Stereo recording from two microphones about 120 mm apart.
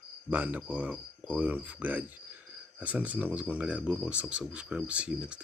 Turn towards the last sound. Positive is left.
turn(degrees=-10)  # may be behind; listen again after turning